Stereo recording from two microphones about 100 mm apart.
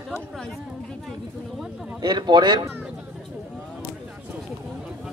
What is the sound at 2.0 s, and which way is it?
Speech, 50° right (ahead or behind).